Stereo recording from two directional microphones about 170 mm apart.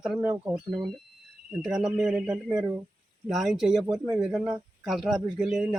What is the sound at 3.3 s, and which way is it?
Speech, centre (ahead or behind).